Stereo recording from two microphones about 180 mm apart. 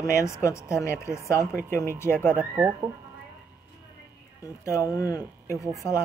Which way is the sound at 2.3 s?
10° right (ahead or behind).